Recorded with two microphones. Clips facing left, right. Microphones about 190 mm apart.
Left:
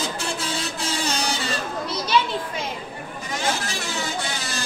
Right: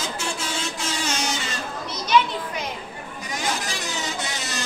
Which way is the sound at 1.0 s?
35° left (ahead or behind).